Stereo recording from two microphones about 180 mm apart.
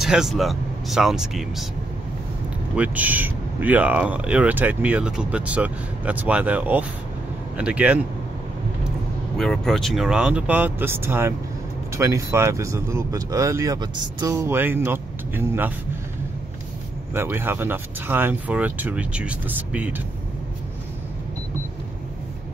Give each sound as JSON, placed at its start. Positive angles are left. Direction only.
{"t": 0.0, "sound": "speech", "side_deg": 0}
{"t": 2.7, "sound": "speech", "side_deg": -10}
{"t": 9.4, "sound": "speech", "side_deg": 0}
{"t": 17.1, "sound": "speech", "side_deg": -10}